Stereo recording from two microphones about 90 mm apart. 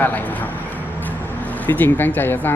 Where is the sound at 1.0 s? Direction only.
20° left (ahead or behind).